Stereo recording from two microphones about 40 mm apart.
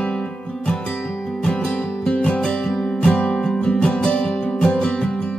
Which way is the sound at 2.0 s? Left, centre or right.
Left.